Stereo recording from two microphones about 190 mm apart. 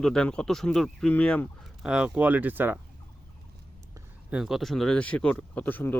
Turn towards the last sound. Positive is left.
turn(degrees=10)  # may be behind; listen again after turning